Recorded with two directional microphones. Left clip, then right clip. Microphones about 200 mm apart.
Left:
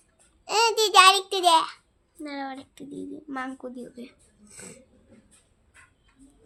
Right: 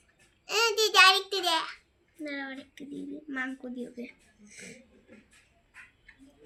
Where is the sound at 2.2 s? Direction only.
50° left (ahead or behind).